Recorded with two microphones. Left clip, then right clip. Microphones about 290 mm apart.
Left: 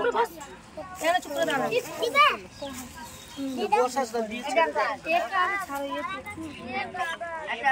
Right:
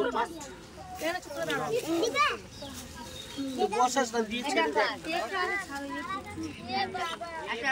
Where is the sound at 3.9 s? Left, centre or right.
Centre.